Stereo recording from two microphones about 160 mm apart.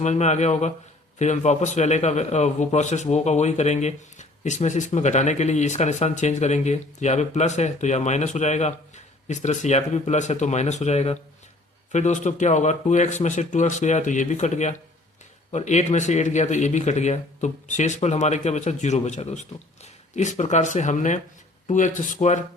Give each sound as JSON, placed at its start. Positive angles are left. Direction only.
{"t": 0.0, "sound": "a man's voice", "side_deg": 45}